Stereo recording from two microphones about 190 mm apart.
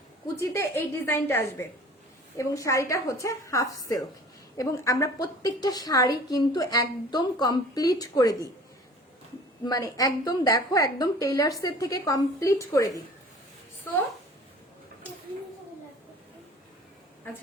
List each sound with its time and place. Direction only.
0.5 s a woman's voice: 15° left (ahead or behind)
2.4 s a woman's voice: 15° left (ahead or behind)
9.6 s a woman's voice: 20° left (ahead or behind)